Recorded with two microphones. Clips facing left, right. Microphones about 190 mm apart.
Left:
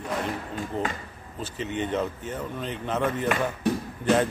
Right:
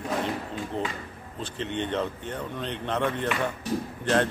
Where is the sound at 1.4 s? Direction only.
5° left (ahead or behind).